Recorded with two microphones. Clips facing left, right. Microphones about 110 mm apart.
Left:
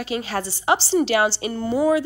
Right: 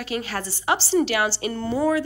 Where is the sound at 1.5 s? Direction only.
10° left (ahead or behind).